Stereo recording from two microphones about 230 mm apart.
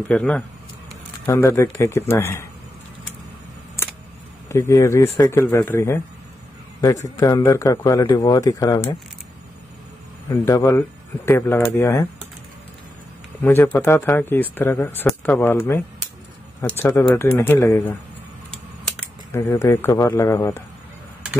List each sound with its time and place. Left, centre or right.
0.1 s speech: centre
4.5 s speech: centre
7.2 s speech: centre
10.3 s speech: centre
13.4 s speech: centre
19.3 s speech: centre